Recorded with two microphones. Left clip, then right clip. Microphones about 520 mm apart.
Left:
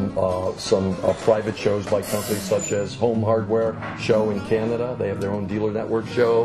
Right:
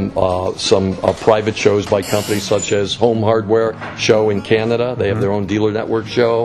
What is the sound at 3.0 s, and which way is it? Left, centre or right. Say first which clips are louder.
Speech: right 5 dB; right.